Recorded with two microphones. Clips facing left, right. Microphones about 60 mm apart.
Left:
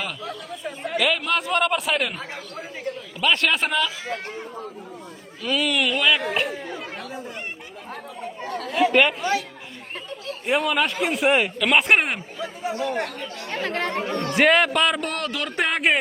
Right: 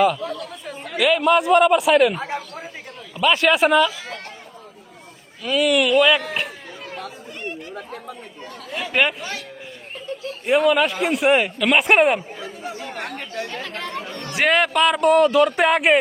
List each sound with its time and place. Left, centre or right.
0.0 s a man's voice: centre
5.4 s speech: centre
8.4 s chatter: left
8.7 s chatter: centre
10.4 s speech: centre
13.1 s speech: right
13.5 s speech: left
14.3 s speech: centre